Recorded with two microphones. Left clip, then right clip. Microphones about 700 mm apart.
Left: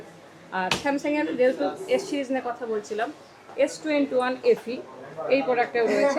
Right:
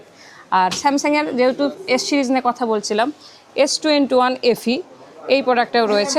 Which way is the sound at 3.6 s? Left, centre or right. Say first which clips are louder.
Right 8 dB; right.